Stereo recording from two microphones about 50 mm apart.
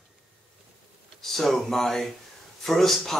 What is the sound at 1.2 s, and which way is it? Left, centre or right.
Speech, centre.